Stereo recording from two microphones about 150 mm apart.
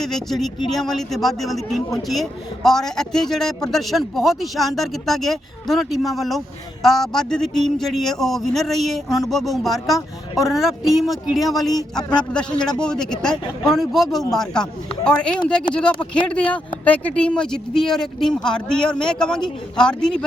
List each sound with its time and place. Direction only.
0.0 s speech: centre (ahead or behind)